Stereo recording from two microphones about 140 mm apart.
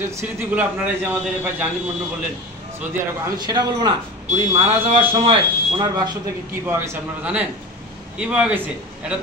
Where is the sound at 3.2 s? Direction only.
30° right (ahead or behind).